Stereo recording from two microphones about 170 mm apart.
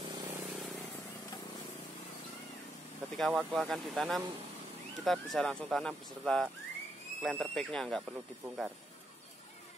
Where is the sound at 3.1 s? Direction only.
Centre (ahead or behind).